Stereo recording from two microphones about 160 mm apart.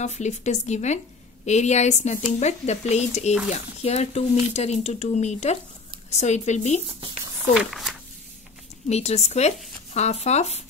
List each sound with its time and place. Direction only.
0.0 s speech: 45° left (ahead or behind)
7.5 s speech: centre (ahead or behind)
8.8 s speech: 45° left (ahead or behind)